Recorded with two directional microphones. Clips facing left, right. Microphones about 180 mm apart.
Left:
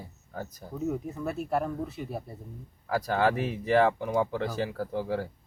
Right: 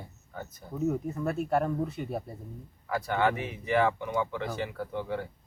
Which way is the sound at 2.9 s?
35° left (ahead or behind).